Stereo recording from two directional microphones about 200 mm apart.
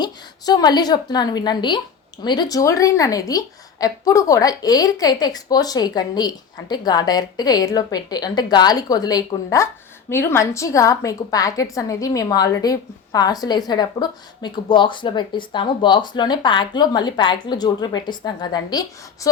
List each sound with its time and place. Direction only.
0.0 s a woman's voice: 20° left (ahead or behind)